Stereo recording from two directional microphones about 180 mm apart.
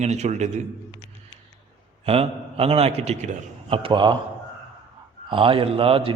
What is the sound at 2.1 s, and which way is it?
A man's voice, 35° right (ahead or behind).